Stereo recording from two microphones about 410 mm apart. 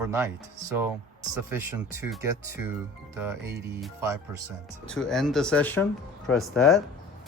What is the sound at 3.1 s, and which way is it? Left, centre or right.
Speech, centre.